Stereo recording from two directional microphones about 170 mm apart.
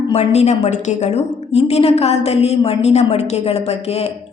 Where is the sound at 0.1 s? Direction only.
40° left (ahead or behind).